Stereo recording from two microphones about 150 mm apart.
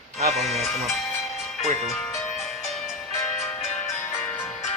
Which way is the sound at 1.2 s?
Centre (ahead or behind).